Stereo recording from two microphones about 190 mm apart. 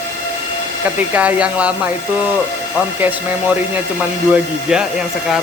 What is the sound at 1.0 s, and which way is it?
Speech, 5° right (ahead or behind).